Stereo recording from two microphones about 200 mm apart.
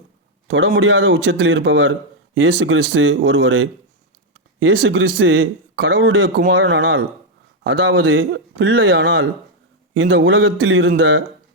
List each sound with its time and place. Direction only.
0.4 s speech: 65° right (ahead or behind)